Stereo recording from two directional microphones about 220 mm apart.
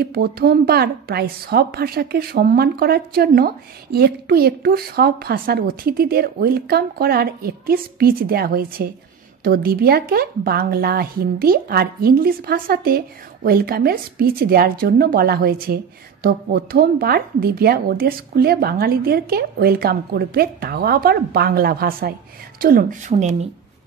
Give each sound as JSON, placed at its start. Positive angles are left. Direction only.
{"t": 0.0, "sound": "a woman's voice", "side_deg": -45}